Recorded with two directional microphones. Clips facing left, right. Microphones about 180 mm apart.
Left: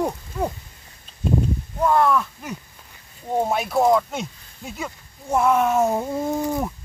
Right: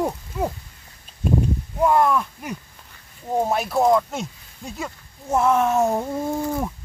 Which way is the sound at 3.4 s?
Centre (ahead or behind).